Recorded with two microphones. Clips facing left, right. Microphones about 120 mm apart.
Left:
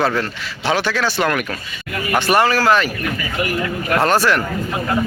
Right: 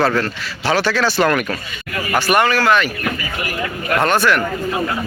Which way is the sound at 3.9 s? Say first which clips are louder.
Even; 35° left (ahead or behind).